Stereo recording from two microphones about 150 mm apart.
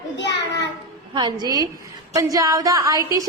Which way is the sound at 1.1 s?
25° right (ahead or behind).